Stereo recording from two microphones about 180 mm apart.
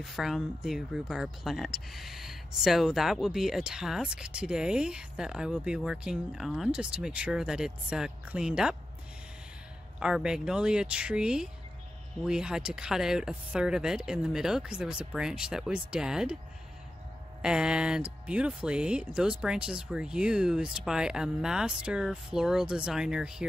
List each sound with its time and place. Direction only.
0.0 s speech: centre (ahead or behind)
9.9 s speech: 5° right (ahead or behind)
17.4 s speech: 5° right (ahead or behind)